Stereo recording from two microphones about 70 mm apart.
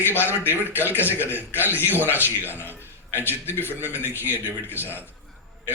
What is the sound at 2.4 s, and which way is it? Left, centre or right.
A man's voice, left.